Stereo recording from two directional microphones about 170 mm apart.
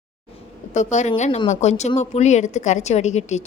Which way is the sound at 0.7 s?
45° left (ahead or behind).